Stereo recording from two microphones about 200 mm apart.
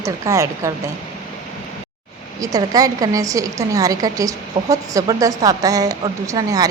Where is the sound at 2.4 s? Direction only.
20° right (ahead or behind).